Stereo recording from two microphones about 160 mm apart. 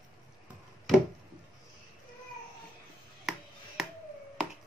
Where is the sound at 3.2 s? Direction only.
Centre (ahead or behind).